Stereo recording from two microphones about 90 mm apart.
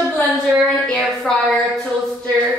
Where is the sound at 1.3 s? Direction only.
10° left (ahead or behind).